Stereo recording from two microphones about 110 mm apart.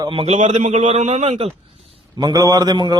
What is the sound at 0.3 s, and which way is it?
A man's voice, 90° right.